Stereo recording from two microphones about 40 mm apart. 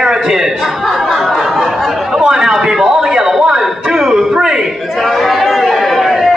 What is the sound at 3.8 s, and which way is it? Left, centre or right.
Music, centre.